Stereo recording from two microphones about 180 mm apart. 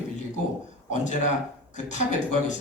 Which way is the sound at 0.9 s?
40° left (ahead or behind).